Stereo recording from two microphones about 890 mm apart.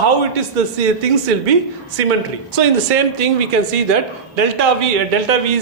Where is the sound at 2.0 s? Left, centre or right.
Right.